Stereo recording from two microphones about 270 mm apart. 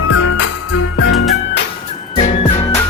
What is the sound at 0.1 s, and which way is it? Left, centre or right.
Music, left.